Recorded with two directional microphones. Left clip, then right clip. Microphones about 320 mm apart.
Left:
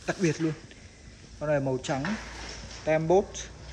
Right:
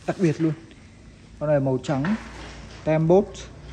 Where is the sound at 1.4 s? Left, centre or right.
Right.